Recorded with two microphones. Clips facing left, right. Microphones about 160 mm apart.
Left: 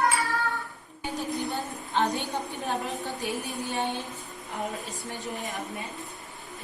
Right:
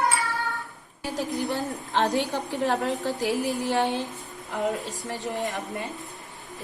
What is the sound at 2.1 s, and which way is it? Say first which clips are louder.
A woman's voice: right 6 dB; 90° right.